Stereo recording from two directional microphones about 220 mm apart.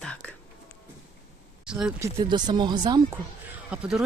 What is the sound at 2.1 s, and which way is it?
Speech, 20° right (ahead or behind).